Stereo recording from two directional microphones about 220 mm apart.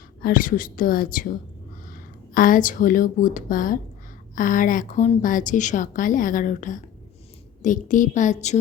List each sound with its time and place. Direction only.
0.2 s a woman's voice: 40° left (ahead or behind)